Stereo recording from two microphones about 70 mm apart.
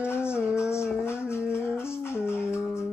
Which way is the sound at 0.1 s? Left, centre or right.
Left.